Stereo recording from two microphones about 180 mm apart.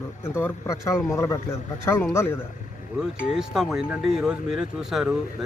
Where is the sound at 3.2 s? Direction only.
Centre (ahead or behind).